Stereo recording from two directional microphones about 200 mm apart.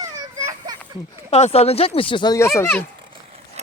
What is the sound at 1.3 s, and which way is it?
Speech, 30° left (ahead or behind).